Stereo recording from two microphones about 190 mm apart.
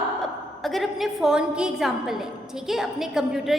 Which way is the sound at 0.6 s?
Centre (ahead or behind).